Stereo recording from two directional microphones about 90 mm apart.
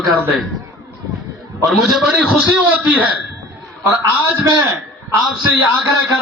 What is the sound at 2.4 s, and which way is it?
Speech, 20° right (ahead or behind).